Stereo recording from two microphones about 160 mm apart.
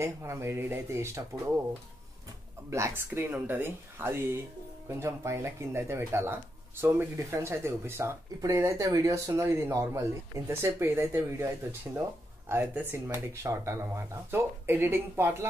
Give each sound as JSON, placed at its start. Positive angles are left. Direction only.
{"t": 0.0, "sound": "speech", "side_deg": -15}
{"t": 2.7, "sound": "speech", "side_deg": -15}